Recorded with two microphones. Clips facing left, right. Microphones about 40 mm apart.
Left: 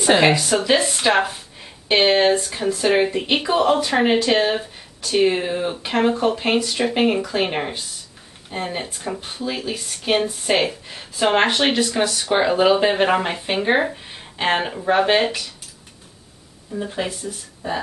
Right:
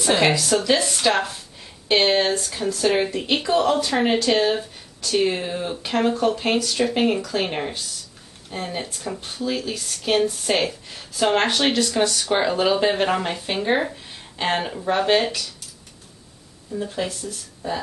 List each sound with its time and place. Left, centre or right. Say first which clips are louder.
0.2 s speech: left 2 dB; left
16.7 s speech: left 1 dB; centre